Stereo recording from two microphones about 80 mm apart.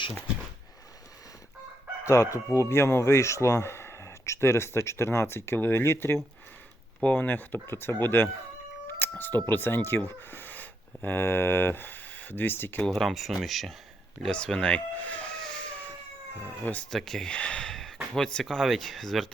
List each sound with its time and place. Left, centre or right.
2.0 s speech: left
12.9 s speech: centre
16.9 s speech: centre